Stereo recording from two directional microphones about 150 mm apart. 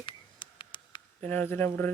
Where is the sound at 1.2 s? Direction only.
10° left (ahead or behind).